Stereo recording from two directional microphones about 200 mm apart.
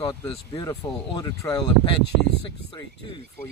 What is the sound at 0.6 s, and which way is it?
Speech, 20° left (ahead or behind).